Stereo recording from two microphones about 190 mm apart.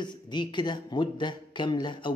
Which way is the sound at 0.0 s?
25° left (ahead or behind).